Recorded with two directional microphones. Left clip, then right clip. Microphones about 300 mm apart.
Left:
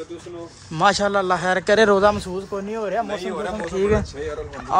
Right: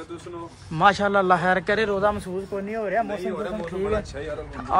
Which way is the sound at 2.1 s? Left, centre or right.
Centre.